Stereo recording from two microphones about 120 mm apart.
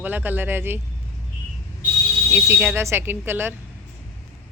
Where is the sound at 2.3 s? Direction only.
20° right (ahead or behind).